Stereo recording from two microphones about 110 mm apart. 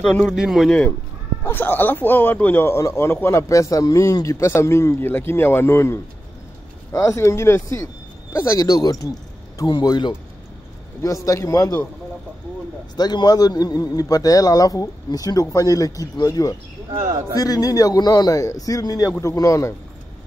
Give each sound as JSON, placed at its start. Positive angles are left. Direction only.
{"t": 0.0, "sound": "speech", "side_deg": 5}
{"t": 0.3, "sound": "speech", "side_deg": -5}
{"t": 1.4, "sound": "a man's voice", "side_deg": 20}
{"t": 11.2, "sound": "speech", "side_deg": 30}
{"t": 12.9, "sound": "speech", "side_deg": 40}